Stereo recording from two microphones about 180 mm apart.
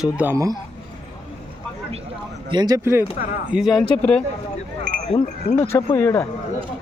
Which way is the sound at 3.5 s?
Centre (ahead or behind).